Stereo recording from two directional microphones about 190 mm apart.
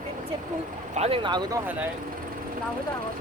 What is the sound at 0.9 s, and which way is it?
Speech, 30° right (ahead or behind).